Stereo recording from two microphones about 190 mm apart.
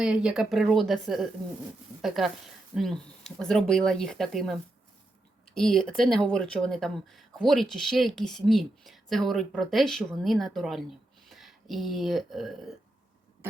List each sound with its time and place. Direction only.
0.0 s speech: 5° right (ahead or behind)
5.5 s speech: centre (ahead or behind)